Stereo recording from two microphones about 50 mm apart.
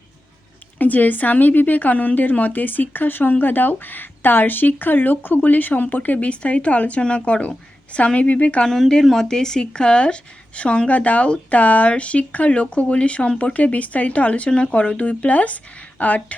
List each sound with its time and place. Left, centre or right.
0.8 s speech: left
8.6 s a woman's voice: centre; by 16.2 s left